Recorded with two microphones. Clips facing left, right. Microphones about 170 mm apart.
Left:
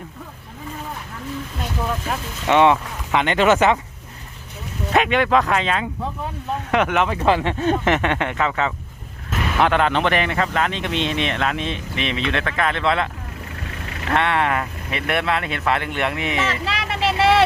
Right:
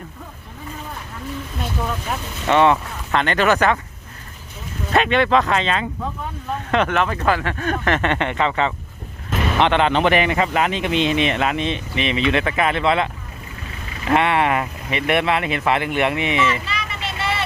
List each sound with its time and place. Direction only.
2.5 s speech: 15° left (ahead or behind)
4.9 s speech: 10° left (ahead or behind)
14.1 s speech: 5° right (ahead or behind)
16.5 s vehicle: 90° left